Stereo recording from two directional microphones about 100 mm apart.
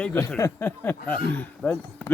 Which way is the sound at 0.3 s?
35° left (ahead or behind).